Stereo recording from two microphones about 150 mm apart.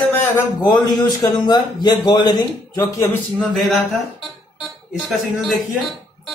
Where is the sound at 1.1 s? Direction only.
25° left (ahead or behind).